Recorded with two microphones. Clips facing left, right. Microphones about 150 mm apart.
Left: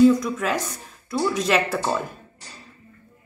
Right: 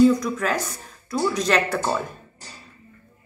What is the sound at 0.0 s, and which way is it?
A woman's voice, centre (ahead or behind).